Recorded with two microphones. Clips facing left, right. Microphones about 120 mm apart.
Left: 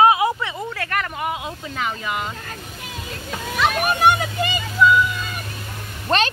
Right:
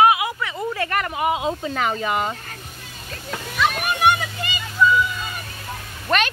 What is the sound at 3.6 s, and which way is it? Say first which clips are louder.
Speech: left 2 dB; 45° left (ahead or behind).